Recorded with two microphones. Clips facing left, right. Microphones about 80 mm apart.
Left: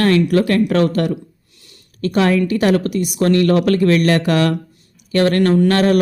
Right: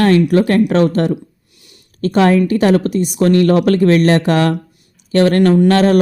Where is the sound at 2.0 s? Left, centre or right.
Right.